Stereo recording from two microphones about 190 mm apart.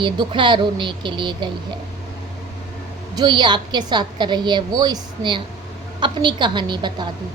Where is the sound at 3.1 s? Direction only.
25° right (ahead or behind).